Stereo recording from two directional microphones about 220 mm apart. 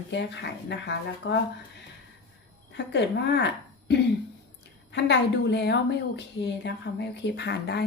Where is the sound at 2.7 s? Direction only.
50° left (ahead or behind).